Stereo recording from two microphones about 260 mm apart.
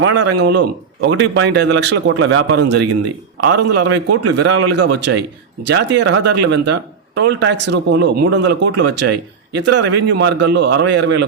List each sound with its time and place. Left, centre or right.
0.0 s speech: right